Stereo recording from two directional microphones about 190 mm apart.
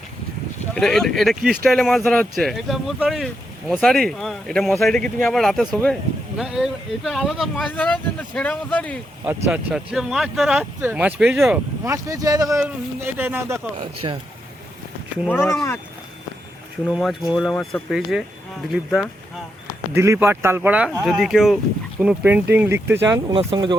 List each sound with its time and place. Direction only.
0.7 s speech: 5° left (ahead or behind)
9.5 s speech: 5° right (ahead or behind)
11.9 s speech: 20° right (ahead or behind)
13.7 s speech: 30° right (ahead or behind)
15.3 s speech: 10° left (ahead or behind)
16.9 s speech: centre (ahead or behind)
19.9 s speech: 15° right (ahead or behind)
23.3 s speech: 30° right (ahead or behind)